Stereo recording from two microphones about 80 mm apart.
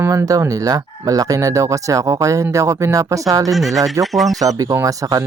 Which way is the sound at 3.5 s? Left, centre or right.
Centre.